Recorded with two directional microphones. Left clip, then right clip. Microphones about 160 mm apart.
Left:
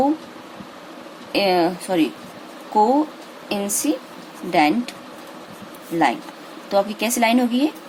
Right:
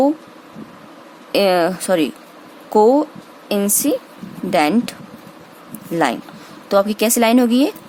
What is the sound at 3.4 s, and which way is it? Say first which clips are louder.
Speech: right 4 dB; 85° right.